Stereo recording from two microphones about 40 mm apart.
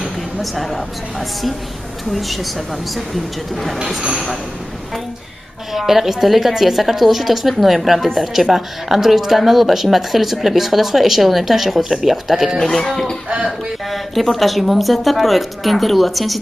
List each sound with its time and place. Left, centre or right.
0.4 s a woman's voice: centre
2.0 s a woman's voice: centre
5.7 s a woman's voice: centre
12.5 s a woman's voice: centre